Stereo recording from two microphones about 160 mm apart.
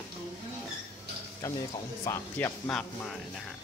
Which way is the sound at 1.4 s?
15° left (ahead or behind).